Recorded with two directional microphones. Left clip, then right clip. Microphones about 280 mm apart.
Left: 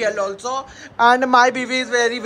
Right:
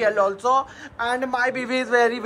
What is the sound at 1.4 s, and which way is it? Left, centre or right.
Speech, centre.